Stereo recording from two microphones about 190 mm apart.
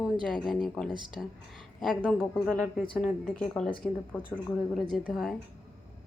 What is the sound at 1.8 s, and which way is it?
A woman's voice, centre (ahead or behind).